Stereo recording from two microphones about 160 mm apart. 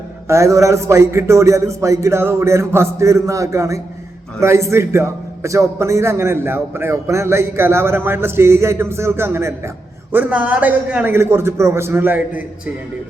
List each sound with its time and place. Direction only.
0.3 s a man's voice: 20° right (ahead or behind)